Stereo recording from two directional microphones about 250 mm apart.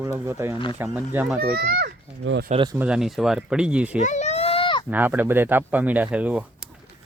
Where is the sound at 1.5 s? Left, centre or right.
Right.